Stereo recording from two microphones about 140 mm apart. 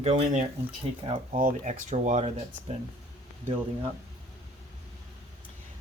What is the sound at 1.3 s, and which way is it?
Speech, 85° right.